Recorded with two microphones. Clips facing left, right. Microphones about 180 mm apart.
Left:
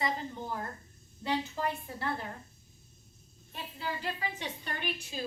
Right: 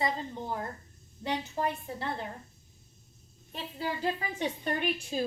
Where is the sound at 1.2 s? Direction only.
20° right (ahead or behind).